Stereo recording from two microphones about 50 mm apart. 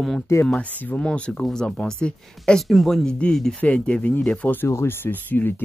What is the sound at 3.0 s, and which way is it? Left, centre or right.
Speech, centre.